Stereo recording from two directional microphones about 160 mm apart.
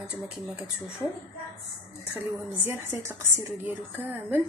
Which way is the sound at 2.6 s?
15° right (ahead or behind).